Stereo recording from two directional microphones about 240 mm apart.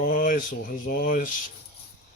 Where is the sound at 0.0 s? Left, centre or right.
Left.